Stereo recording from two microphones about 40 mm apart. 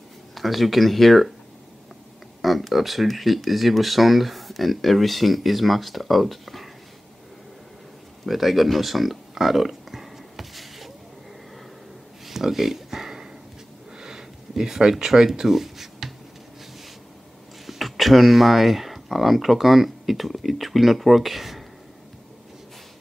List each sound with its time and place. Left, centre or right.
0.3 s speech: centre
2.4 s speech: centre
8.3 s a sound: centre
12.3 s a sound: centre
13.9 s sniff: centre
14.5 s speech: centre
17.6 s speech: centre